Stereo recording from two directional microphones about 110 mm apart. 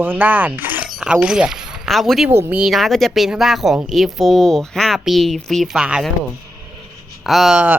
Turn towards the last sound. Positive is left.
turn(degrees=-10)  # may be behind; listen again after turning